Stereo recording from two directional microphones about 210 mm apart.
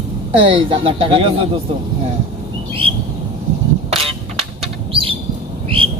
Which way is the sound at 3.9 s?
30° right (ahead or behind).